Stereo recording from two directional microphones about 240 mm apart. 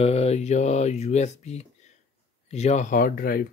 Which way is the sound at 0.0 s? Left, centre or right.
Left.